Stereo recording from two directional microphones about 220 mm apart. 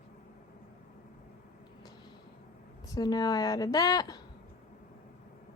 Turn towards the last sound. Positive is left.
turn(degrees=15)  # may be behind; listen again after turning